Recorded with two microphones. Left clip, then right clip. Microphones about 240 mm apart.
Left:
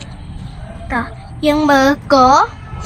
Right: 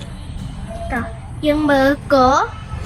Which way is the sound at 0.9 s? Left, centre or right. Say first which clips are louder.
Left 6 dB; left.